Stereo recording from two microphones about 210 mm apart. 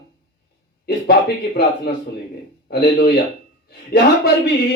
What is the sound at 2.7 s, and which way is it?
Speech, 50° left (ahead or behind).